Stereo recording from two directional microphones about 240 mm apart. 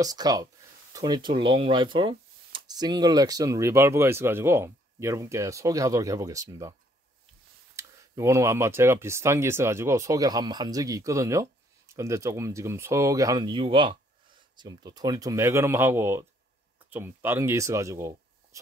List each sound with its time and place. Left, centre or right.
0.0 s speech: centre
7.7 s speech: centre